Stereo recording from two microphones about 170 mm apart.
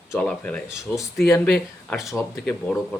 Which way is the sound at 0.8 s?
20° left (ahead or behind).